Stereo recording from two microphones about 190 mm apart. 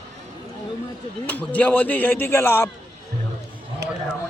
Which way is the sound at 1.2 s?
10° left (ahead or behind).